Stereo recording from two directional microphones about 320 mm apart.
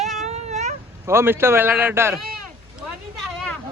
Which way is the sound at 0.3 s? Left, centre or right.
Right.